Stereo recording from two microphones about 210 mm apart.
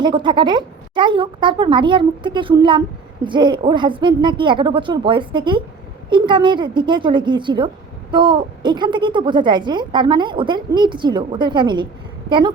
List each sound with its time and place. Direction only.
0.0 s a woman's voice: 20° right (ahead or behind)